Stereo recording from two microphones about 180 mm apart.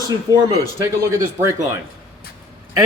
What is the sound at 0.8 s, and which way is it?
Speech, 15° right (ahead or behind).